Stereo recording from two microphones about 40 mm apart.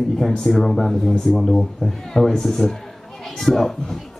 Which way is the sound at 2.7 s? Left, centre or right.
Centre.